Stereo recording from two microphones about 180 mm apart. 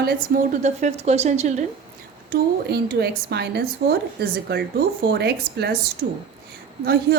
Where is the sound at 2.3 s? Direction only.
60° right (ahead or behind).